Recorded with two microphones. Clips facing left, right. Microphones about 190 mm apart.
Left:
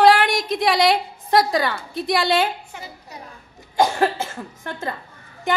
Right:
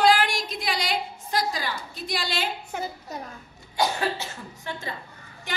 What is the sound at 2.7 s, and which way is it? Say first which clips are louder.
Speech: right 6 dB; 45° right (ahead or behind).